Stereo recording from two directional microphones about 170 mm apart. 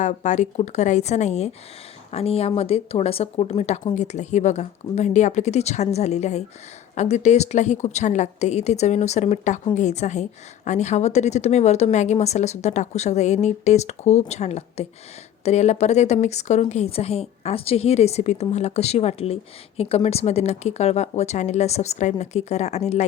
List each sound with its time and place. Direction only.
0.0 s a woman's voice: 45° left (ahead or behind)